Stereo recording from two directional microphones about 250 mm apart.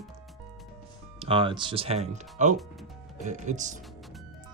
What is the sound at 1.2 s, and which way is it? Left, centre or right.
Speech, centre.